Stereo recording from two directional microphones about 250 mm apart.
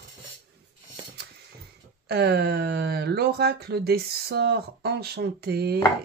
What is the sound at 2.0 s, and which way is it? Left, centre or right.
Speech, right.